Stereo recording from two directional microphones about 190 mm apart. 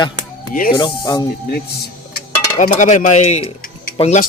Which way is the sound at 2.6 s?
40° left (ahead or behind).